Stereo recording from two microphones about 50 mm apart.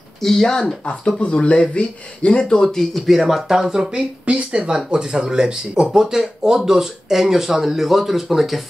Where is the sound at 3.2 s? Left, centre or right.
Centre.